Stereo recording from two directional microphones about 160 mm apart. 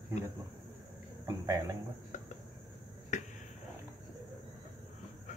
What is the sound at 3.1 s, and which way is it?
Finger snapping, 50° left (ahead or behind).